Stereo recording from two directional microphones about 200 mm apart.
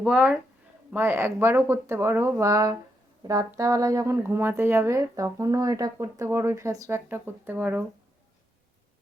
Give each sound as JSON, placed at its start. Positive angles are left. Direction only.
{"t": 0.0, "sound": "speech", "side_deg": -5}